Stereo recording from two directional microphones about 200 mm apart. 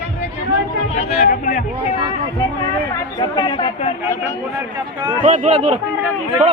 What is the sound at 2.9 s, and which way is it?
Speech, 20° left (ahead or behind).